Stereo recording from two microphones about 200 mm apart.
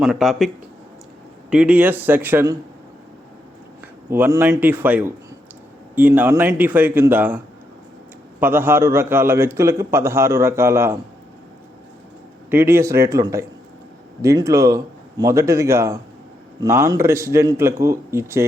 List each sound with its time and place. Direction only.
0.0 s a man's voice: centre (ahead or behind)
4.1 s a man's voice: 10° right (ahead or behind)
12.5 s a man's voice: 10° right (ahead or behind)